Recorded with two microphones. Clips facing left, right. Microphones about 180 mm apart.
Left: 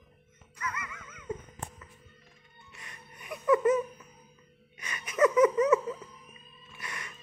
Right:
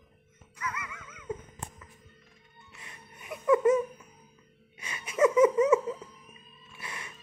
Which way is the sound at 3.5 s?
Centre (ahead or behind).